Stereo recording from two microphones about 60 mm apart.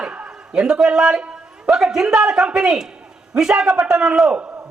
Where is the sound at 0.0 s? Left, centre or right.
Centre.